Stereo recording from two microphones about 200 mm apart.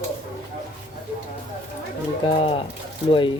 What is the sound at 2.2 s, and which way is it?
Speech, 30° left (ahead or behind).